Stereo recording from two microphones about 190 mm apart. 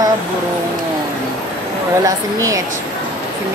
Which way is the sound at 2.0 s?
20° right (ahead or behind).